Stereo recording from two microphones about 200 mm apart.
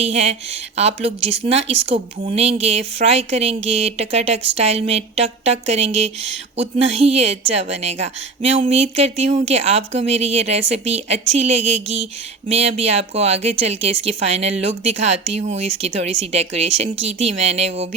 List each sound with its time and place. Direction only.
0.0 s speech: 30° right (ahead or behind)